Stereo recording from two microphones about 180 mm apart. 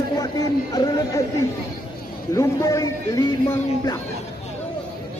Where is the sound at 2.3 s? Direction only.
15° left (ahead or behind).